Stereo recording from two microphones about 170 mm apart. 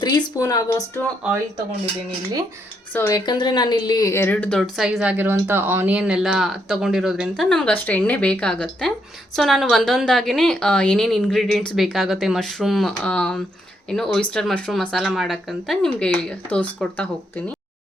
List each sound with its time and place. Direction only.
0.0 s speech: 25° left (ahead or behind)
2.9 s speech: 10° left (ahead or behind)
3.2 s speech: 25° left (ahead or behind); by 17.4 s 10° left (ahead or behind)